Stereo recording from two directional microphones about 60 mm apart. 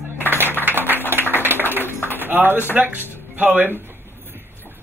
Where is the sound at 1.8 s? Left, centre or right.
Left.